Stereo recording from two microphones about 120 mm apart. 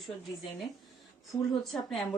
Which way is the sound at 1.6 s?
Centre (ahead or behind).